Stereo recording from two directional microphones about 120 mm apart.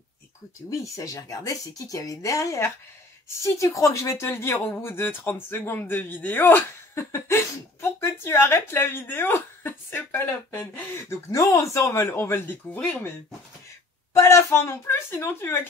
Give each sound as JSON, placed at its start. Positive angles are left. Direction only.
{"t": 0.7, "sound": "speech", "side_deg": 25}
{"t": 14.1, "sound": "speech", "side_deg": 20}